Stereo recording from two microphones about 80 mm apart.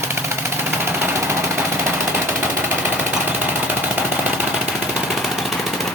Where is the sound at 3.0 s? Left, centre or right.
Right; by 5.9 s centre.